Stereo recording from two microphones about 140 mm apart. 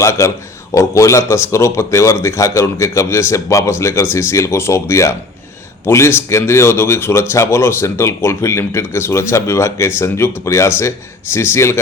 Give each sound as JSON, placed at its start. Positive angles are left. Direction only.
{"t": 0.0, "sound": "a man's voice", "side_deg": 20}